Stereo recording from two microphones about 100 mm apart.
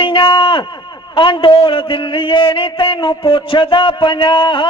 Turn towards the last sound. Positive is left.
turn(degrees=55)  # may be behind; listen again after turning